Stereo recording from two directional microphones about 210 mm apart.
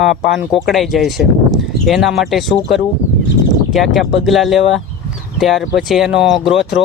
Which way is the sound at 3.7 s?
Centre (ahead or behind).